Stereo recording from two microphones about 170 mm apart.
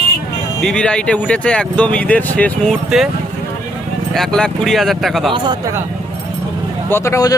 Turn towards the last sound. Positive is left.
turn(degrees=20)  # may be behind; listen again after turning